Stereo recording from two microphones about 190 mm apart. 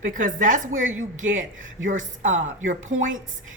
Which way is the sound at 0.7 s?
90° right.